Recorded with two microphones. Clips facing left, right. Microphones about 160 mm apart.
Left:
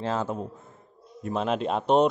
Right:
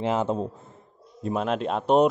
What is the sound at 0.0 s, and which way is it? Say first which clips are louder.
Speech: right 4 dB; 20° right (ahead or behind).